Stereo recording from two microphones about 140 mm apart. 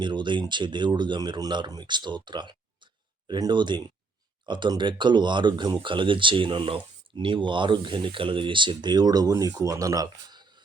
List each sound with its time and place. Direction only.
0.0 s speech: 35° right (ahead or behind)